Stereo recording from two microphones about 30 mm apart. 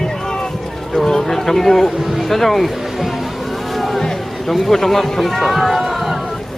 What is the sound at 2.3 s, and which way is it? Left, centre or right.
Speech, centre.